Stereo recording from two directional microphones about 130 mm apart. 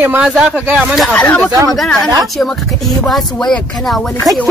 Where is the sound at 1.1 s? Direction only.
10° left (ahead or behind).